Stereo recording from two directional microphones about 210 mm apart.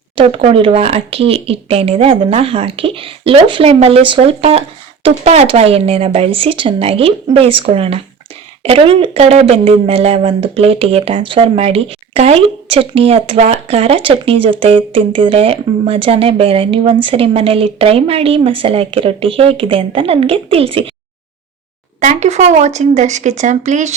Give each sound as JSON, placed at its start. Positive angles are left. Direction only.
{"t": 0.2, "sound": "speech", "side_deg": -25}
{"t": 22.0, "sound": "speech", "side_deg": -35}